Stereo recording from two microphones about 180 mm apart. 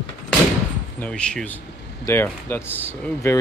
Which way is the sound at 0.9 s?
5° left (ahead or behind).